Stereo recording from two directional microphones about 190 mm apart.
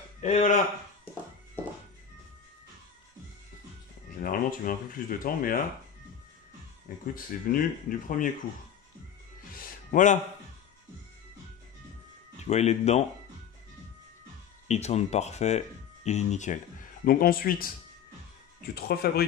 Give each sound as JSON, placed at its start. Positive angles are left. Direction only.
{"t": 0.2, "sound": "speech", "side_deg": 35}
{"t": 4.2, "sound": "speech", "side_deg": 50}
{"t": 7.2, "sound": "speech", "side_deg": 50}
{"t": 9.6, "sound": "music", "side_deg": 40}
{"t": 12.4, "sound": "speech", "side_deg": 35}
{"t": 14.7, "sound": "speech", "side_deg": 35}
{"t": 17.0, "sound": "speech", "side_deg": 50}
{"t": 18.8, "sound": "speech", "side_deg": 55}